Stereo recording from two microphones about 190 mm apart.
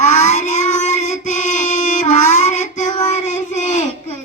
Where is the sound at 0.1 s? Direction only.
40° left (ahead or behind).